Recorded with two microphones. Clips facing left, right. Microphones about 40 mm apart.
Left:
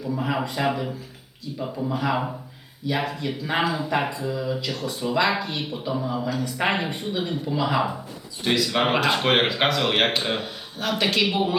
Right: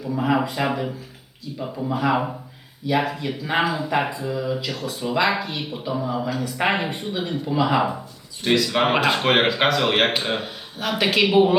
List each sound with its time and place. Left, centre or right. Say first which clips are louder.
0.0 s speech: right 4 dB; centre